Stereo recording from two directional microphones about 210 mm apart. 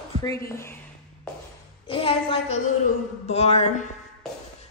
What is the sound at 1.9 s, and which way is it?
A woman's voice, 25° left (ahead or behind).